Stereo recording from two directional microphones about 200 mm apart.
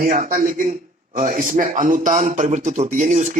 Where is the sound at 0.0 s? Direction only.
45° right (ahead or behind).